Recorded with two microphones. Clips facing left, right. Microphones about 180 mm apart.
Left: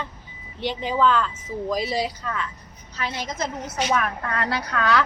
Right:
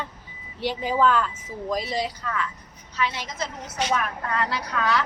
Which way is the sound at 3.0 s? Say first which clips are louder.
Even; 45° left (ahead or behind).